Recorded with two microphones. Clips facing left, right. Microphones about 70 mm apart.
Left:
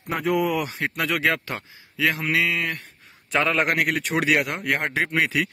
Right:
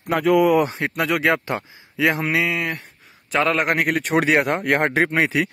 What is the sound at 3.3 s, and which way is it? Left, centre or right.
Speech, centre.